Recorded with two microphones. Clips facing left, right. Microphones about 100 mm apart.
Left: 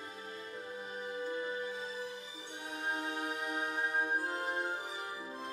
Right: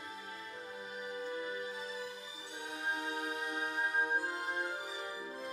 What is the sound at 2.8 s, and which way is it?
Music, 35° left (ahead or behind).